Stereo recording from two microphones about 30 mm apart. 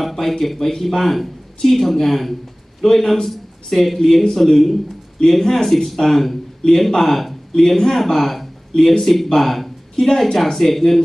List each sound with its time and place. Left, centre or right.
0.0 s a man's voice: centre
7.5 s a man's voice: centre